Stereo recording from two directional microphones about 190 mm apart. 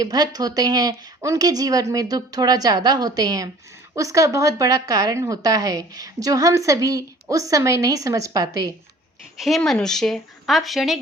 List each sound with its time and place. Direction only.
0.0 s a woman's voice: 20° right (ahead or behind)
9.4 s speech: centre (ahead or behind)